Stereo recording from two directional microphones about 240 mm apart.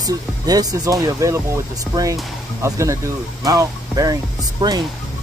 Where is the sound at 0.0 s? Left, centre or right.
Centre.